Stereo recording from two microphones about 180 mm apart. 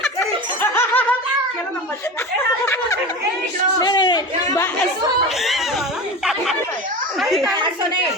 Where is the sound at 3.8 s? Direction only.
25° left (ahead or behind).